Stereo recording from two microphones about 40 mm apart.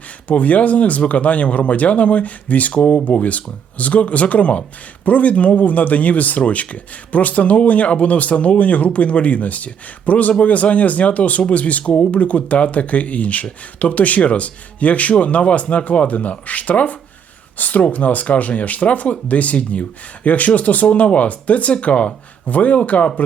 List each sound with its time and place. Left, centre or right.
0.3 s speech: left